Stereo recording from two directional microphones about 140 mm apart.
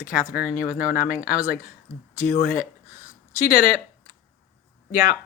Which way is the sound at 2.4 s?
70° left (ahead or behind).